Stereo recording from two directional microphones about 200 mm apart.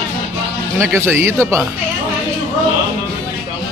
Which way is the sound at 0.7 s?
10° right (ahead or behind).